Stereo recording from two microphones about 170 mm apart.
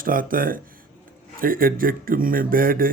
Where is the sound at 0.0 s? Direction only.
55° right (ahead or behind).